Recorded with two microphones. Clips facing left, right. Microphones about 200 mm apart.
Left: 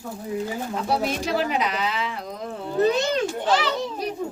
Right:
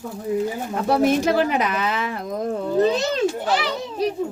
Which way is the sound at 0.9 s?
55° right (ahead or behind).